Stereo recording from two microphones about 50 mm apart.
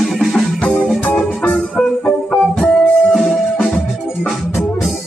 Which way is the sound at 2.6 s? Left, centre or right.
Centre.